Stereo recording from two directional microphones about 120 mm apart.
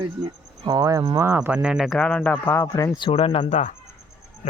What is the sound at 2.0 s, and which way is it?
Speech, 10° left (ahead or behind).